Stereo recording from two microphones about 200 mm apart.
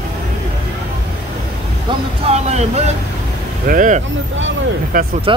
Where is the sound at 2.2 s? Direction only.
35° right (ahead or behind).